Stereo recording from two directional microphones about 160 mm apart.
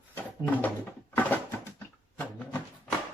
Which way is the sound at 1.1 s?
10° left (ahead or behind).